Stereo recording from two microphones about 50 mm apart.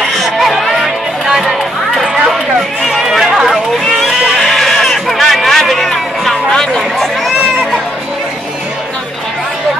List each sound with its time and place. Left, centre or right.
0.0 s music: centre
2.8 s chatter: centre
4.4 s a sound: centre